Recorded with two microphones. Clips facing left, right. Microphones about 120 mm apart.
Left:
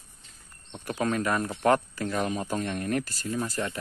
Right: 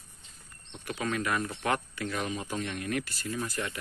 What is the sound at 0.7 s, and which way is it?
Speech, 40° left (ahead or behind).